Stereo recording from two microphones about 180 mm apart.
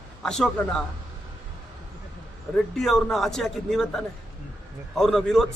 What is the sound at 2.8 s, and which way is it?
A man's voice, centre (ahead or behind).